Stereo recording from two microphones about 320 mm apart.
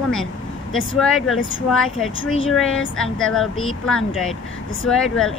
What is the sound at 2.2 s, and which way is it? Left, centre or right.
Speech, left.